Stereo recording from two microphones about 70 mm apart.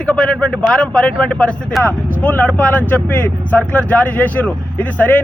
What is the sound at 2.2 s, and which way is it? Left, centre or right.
Speech, left.